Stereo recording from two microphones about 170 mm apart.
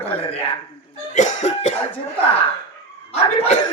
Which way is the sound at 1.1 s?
45° left (ahead or behind).